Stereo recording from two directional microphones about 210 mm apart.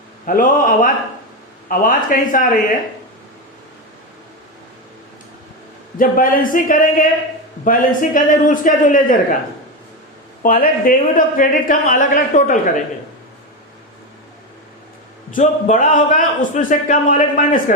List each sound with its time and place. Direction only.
0.3 s a man's voice: 40° left (ahead or behind)
6.0 s a man's voice: 40° left (ahead or behind)
10.4 s a man's voice: 40° left (ahead or behind)
15.4 s a man's voice: 35° left (ahead or behind)